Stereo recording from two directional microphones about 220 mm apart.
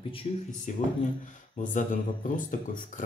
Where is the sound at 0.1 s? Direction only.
25° left (ahead or behind).